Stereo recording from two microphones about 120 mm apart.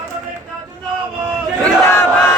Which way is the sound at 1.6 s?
20° left (ahead or behind).